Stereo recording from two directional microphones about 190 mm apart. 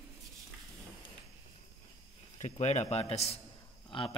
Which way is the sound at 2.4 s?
35° left (ahead or behind).